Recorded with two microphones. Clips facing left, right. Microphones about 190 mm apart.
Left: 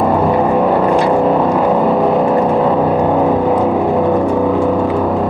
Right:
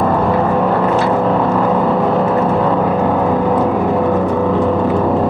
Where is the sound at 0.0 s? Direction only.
15° left (ahead or behind).